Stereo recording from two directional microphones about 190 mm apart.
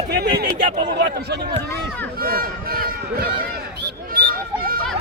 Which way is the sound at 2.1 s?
50° right (ahead or behind).